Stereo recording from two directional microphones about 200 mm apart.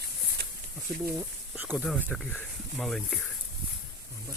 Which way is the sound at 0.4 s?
50° right (ahead or behind).